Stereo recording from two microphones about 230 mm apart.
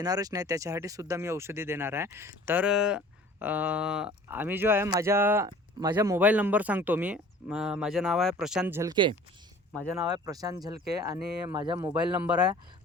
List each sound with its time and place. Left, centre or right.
0.0 s speech: centre
11.9 s speech: centre